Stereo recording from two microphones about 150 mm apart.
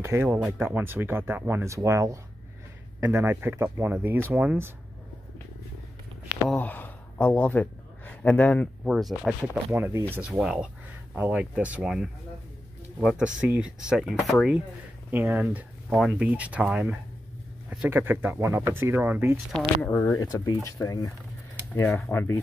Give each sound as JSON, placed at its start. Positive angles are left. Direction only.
{"t": 0.0, "sound": "speech", "side_deg": -15}
{"t": 6.5, "sound": "speech", "side_deg": 10}
{"t": 9.8, "sound": "speech", "side_deg": -15}
{"t": 13.2, "sound": "speech", "side_deg": -5}
{"t": 19.8, "sound": "speech", "side_deg": 15}
{"t": 20.2, "sound": "speech", "side_deg": 25}